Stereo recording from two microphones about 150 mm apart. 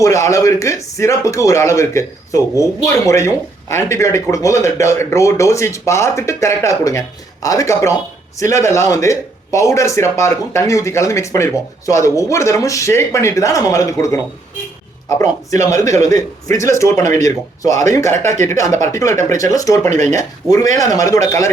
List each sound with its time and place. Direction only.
0.0 s speech: 20° left (ahead or behind)
18.2 s speech: 55° right (ahead or behind)
18.4 s speech: 20° left (ahead or behind)